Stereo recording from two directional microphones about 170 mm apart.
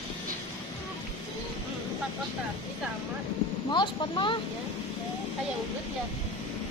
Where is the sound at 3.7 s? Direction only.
30° left (ahead or behind).